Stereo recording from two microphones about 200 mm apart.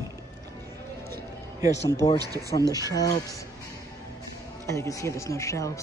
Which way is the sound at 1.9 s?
15° left (ahead or behind).